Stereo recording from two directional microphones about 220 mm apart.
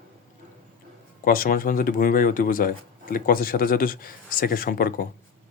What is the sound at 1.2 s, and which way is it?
Speech, 40° left (ahead or behind).